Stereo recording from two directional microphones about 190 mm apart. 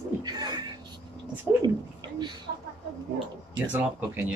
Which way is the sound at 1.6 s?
25° right (ahead or behind).